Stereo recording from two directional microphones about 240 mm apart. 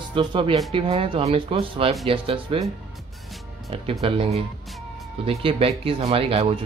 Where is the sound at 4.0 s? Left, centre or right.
Right.